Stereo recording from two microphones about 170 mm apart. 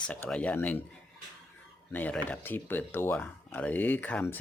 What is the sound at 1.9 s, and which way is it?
Speech, 10° left (ahead or behind).